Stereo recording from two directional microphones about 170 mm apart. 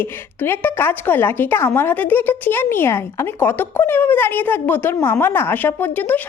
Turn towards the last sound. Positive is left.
turn(degrees=10)  # may be behind; listen again after turning